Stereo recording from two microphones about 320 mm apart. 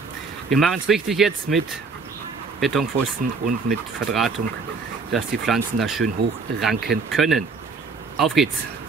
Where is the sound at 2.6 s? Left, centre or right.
Centre.